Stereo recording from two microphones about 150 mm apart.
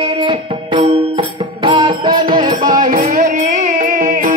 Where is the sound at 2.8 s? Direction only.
55° right (ahead or behind).